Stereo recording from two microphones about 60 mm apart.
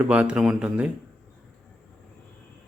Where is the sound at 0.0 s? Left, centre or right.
Right.